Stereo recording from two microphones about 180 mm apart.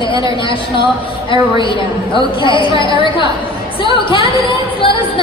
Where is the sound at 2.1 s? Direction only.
25° left (ahead or behind).